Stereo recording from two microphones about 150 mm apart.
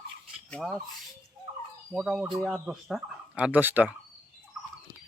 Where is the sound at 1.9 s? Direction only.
5° right (ahead or behind).